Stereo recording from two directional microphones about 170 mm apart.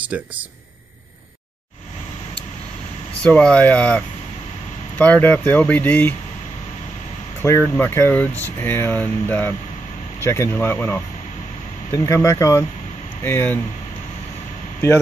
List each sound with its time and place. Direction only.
0.0 s speech: 10° right (ahead or behind)
3.2 s speech: 5° left (ahead or behind)
7.4 s speech: 15° left (ahead or behind)